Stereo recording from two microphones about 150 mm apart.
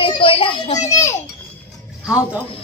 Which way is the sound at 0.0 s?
35° left (ahead or behind).